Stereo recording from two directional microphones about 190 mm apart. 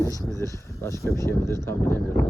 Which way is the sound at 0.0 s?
15° left (ahead or behind).